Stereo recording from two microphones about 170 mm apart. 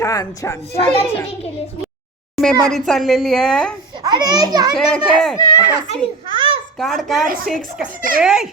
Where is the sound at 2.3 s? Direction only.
Centre (ahead or behind).